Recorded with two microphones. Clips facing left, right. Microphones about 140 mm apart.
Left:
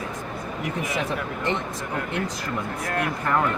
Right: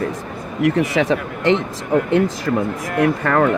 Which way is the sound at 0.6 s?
90° right.